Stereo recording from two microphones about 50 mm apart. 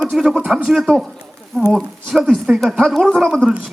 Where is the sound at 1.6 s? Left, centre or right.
Right.